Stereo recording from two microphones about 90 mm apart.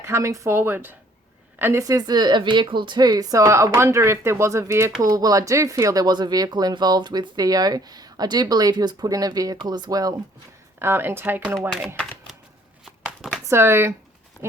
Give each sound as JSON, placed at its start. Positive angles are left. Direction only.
{"t": 0.0, "sound": "speech", "side_deg": -35}
{"t": 1.8, "sound": "speech", "side_deg": -45}
{"t": 10.8, "sound": "speech", "side_deg": -25}
{"t": 13.5, "sound": "speech", "side_deg": -30}